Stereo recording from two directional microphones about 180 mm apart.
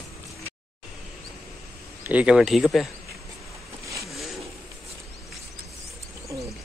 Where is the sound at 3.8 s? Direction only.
15° right (ahead or behind).